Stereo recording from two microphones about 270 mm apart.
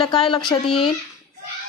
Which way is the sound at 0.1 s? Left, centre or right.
Centre.